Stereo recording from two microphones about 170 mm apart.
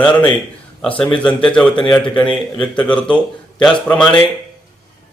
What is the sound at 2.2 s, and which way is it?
Speech, 30° left (ahead or behind).